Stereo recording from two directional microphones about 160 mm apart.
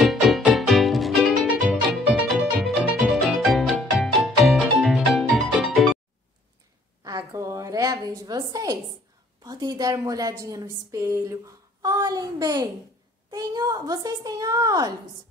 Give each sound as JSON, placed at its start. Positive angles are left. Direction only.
{"t": 0.0, "sound": "music", "side_deg": 0}
{"t": 7.0, "sound": "a sound", "side_deg": -25}
{"t": 9.4, "sound": "a woman's voice", "side_deg": -25}